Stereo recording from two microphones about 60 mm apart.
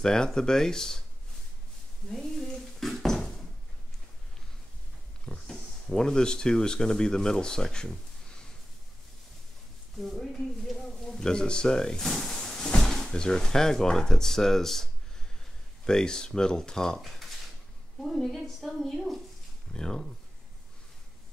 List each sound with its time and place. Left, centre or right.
0.0 s speech: centre
2.0 s a sound: centre
5.2 s speech: centre
9.9 s a woman's voice: centre
10.3 s a sound: centre
12.8 s a woman's voice: centre